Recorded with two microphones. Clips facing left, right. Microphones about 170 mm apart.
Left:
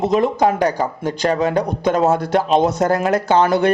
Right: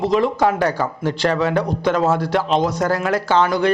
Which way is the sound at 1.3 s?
40° left (ahead or behind).